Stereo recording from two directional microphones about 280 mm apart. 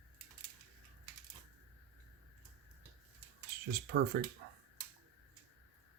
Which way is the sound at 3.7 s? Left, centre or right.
Right.